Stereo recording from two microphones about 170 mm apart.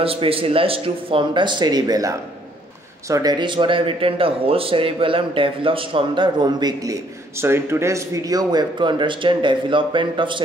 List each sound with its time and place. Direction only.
0.0 s speech: 35° right (ahead or behind)